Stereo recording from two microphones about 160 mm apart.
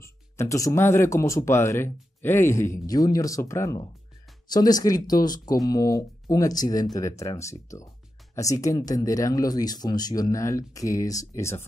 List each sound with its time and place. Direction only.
0.0 s speech: 20° left (ahead or behind)